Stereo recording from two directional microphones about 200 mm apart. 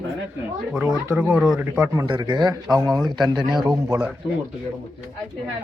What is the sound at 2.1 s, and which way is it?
Speech, 25° right (ahead or behind).